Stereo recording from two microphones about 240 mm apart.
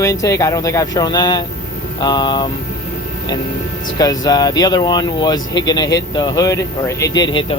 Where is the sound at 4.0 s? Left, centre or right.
Centre.